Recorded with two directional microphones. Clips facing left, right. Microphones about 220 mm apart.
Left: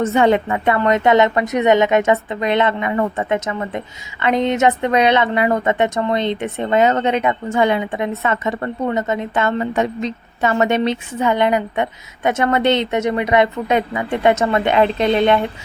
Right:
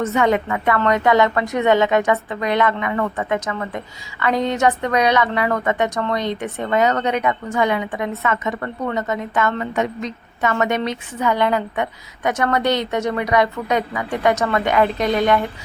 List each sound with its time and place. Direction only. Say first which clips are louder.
0.0 s a woman's voice: left 3 dB; 30° left (ahead or behind)